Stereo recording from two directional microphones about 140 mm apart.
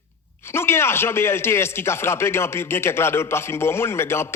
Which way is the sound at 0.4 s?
15° left (ahead or behind).